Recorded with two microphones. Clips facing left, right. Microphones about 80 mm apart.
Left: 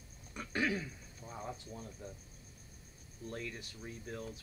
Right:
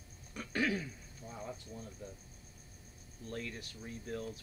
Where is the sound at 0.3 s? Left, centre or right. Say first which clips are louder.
Right 1 dB; left.